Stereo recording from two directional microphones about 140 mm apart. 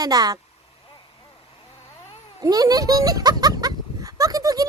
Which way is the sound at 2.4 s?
25° right (ahead or behind).